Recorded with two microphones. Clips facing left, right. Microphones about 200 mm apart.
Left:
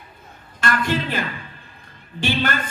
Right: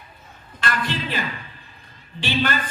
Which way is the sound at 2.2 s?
50° left (ahead or behind).